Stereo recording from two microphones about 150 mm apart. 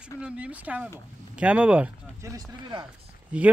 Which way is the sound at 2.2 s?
25° right (ahead or behind).